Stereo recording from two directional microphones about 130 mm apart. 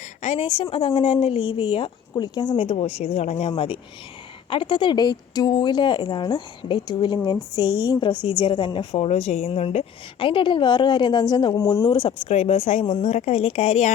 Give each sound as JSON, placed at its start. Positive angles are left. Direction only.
{"t": 0.2, "sound": "speech", "side_deg": 50}
{"t": 2.6, "sound": "a woman's voice", "side_deg": 50}
{"t": 9.0, "sound": "a woman's voice", "side_deg": 55}
{"t": 11.9, "sound": "speech", "side_deg": 40}
{"t": 13.0, "sound": "speech", "side_deg": 60}